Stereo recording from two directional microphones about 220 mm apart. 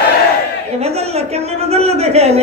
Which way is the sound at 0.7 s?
30° right (ahead or behind).